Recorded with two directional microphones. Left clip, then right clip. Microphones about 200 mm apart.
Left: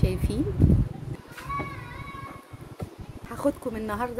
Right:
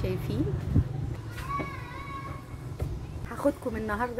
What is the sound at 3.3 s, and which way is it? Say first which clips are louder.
Speech: left 1 dB; 10° left (ahead or behind).